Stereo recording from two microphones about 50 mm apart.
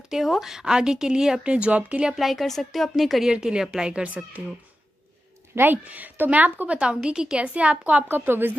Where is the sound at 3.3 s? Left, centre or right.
Centre.